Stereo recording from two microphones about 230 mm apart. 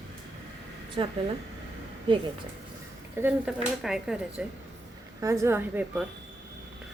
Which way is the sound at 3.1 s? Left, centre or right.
Centre.